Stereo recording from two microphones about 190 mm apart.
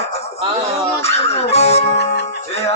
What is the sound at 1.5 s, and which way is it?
Speech, 35° left (ahead or behind).